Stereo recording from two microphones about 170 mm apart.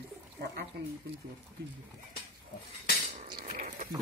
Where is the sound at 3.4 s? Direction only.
45° right (ahead or behind).